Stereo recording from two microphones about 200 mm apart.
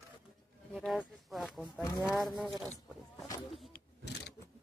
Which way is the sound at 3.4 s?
Centre (ahead or behind).